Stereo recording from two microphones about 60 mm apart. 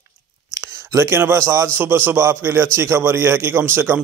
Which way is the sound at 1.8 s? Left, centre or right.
Right.